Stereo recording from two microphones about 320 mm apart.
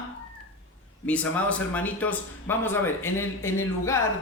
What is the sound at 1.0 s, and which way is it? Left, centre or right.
Speech, centre.